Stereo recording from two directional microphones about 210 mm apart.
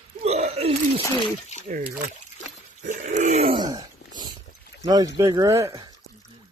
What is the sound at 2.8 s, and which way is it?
Dog, 35° right (ahead or behind).